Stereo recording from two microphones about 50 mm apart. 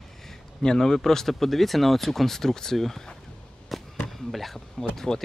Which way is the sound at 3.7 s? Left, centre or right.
Centre.